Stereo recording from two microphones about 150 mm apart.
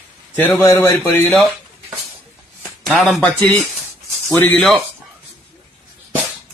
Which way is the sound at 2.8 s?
Centre (ahead or behind).